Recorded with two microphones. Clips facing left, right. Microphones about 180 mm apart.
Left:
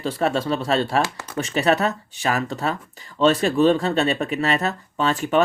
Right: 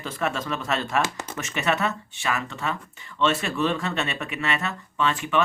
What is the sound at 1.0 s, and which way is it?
Speech, 20° right (ahead or behind).